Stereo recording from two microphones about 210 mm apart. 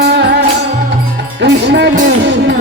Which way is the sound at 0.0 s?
55° right (ahead or behind).